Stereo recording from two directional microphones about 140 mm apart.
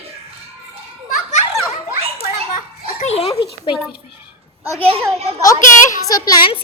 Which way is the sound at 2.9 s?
50° left (ahead or behind).